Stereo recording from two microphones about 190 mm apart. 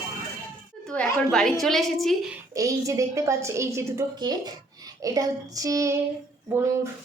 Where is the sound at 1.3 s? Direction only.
Centre (ahead or behind).